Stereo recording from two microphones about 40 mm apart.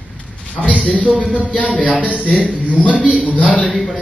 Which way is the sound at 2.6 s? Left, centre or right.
Right.